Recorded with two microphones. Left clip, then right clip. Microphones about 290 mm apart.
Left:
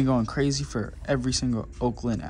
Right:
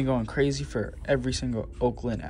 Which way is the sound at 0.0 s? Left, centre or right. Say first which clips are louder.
Left 1 dB; centre.